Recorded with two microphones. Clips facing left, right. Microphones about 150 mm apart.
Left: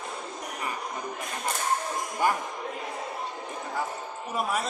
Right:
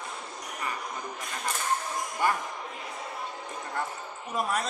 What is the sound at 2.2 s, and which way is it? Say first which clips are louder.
Speech: left 2 dB; 15° left (ahead or behind).